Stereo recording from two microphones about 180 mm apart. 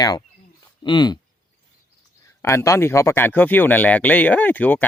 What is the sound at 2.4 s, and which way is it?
Speech, 15° left (ahead or behind).